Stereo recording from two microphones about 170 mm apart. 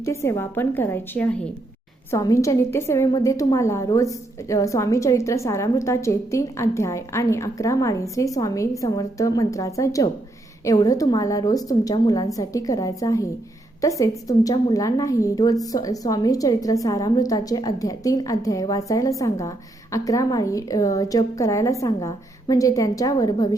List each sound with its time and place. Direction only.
0.0 s a woman's voice: 15° left (ahead or behind)